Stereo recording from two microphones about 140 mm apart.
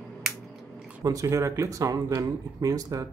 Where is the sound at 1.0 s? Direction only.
25° right (ahead or behind).